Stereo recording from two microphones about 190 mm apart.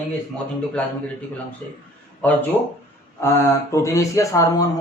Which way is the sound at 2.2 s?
10° left (ahead or behind).